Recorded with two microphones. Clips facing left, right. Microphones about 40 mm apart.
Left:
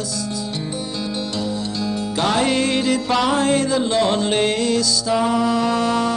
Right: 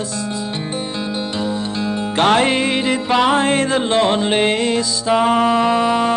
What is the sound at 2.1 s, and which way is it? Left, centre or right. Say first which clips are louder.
Music: right 5 dB; right.